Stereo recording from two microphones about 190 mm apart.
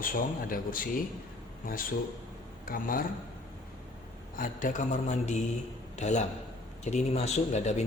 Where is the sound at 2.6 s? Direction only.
50° left (ahead or behind).